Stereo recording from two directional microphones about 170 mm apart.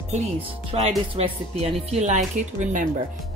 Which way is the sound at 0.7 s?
35° right (ahead or behind).